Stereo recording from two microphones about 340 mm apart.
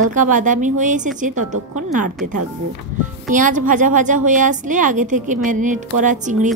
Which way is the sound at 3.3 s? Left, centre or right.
Right.